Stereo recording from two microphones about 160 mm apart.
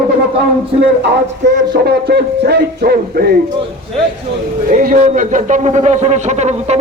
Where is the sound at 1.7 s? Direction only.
80° right.